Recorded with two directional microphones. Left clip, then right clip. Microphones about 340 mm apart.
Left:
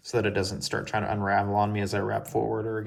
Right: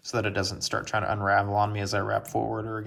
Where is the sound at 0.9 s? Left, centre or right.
Centre.